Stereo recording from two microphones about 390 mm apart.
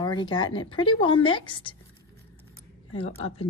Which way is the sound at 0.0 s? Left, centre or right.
Centre.